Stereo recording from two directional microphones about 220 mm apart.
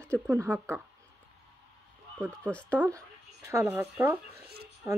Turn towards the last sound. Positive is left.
turn(degrees=-10)  # may be behind; listen again after turning